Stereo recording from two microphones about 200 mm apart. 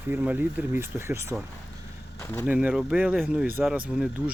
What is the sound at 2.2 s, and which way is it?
Speech, 10° left (ahead or behind).